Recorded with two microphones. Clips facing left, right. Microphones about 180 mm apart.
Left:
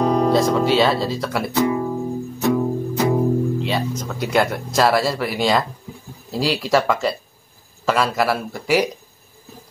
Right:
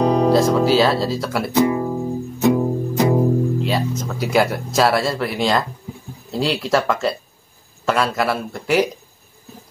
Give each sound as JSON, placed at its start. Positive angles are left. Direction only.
{"t": 0.0, "sound": "music", "side_deg": -15}
{"t": 0.3, "sound": "speech", "side_deg": 0}
{"t": 1.5, "sound": "speech", "side_deg": -15}